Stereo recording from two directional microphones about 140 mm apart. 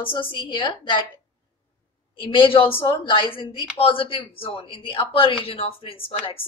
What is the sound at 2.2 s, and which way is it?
Speech, 35° left (ahead or behind).